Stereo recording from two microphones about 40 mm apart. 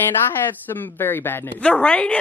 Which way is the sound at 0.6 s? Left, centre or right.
Left.